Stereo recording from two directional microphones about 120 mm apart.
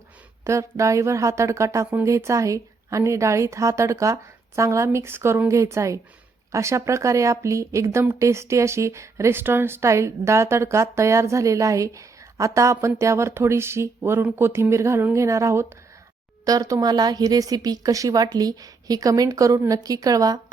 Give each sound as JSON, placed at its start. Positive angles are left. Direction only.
{"t": 0.4, "sound": "a woman's voice", "side_deg": -25}